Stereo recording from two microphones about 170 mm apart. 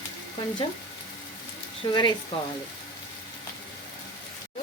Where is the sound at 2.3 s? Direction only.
30° left (ahead or behind).